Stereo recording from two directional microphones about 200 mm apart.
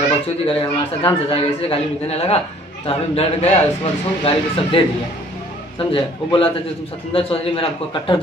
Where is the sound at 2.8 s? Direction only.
30° left (ahead or behind).